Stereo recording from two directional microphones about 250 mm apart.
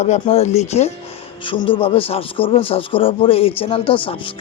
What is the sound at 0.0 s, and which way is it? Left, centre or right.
Speech, left.